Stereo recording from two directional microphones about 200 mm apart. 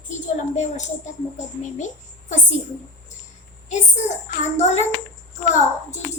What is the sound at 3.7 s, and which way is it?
A woman's voice, 35° left (ahead or behind).